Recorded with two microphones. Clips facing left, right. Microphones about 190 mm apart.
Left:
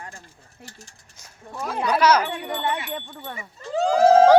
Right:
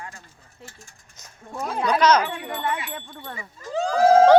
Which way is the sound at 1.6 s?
5° left (ahead or behind).